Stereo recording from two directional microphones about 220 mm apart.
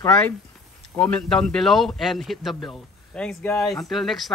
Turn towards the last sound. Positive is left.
turn(degrees=0)  # may be behind; listen again after turning